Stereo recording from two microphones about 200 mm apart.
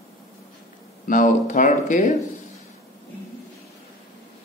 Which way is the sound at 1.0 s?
40° left (ahead or behind).